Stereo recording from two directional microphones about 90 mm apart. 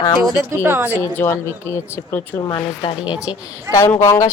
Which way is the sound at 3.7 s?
35° left (ahead or behind).